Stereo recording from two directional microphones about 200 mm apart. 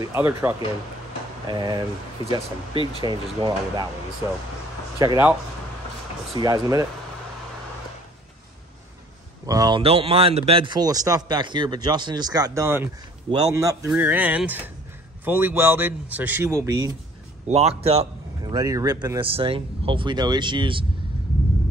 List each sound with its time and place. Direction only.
0.0 s a man's voice: 10° right (ahead or behind)
1.5 s speech: 20° right (ahead or behind)
4.9 s speech: 15° right (ahead or behind)
6.4 s speech: 20° right (ahead or behind)
9.5 s a man's voice: 20° right (ahead or behind)
17.5 s speech: 30° right (ahead or behind)
18.4 s speech: 20° right (ahead or behind)